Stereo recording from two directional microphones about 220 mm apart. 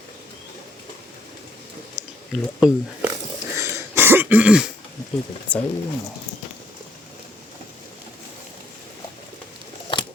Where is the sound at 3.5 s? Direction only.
15° right (ahead or behind).